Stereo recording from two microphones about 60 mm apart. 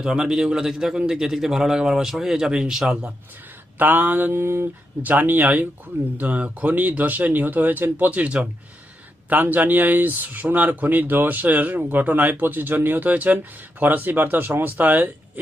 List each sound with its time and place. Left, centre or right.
0.0 s a man's voice: centre
3.8 s speech: right
5.0 s speech: right